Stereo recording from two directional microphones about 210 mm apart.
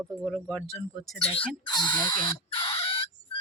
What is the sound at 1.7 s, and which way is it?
Crow, 20° left (ahead or behind).